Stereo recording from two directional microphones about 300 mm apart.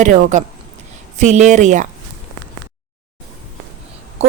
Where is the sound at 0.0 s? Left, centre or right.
Right.